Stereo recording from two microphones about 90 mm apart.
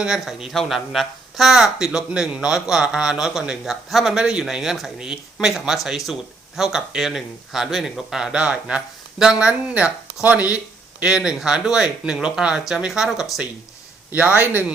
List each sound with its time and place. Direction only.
0.0 s a man's voice: 5° right (ahead or behind)
14.1 s a man's voice: 15° right (ahead or behind)